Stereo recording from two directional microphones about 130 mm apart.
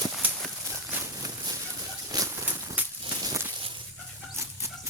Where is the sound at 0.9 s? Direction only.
25° right (ahead or behind).